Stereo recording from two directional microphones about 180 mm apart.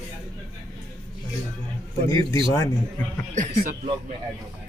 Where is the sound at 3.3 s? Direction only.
45° right (ahead or behind).